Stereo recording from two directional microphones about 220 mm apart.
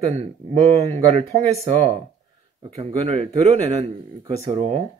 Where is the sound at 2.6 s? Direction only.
25° right (ahead or behind).